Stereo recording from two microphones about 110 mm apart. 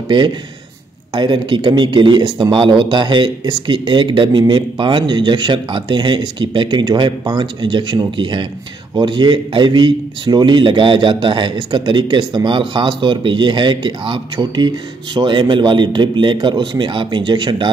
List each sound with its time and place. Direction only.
1.1 s a man's voice: 45° right (ahead or behind)